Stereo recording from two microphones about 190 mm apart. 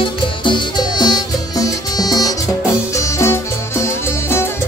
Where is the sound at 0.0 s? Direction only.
25° left (ahead or behind).